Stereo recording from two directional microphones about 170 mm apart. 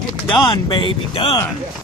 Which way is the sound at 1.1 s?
35° left (ahead or behind).